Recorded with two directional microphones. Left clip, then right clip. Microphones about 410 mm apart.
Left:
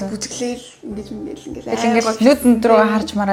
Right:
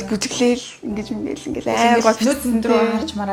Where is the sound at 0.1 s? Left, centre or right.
Right.